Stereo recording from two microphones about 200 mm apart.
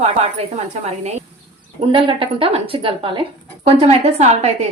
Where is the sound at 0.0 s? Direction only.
30° right (ahead or behind).